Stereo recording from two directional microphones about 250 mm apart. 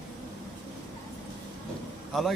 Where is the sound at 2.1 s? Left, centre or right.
Centre.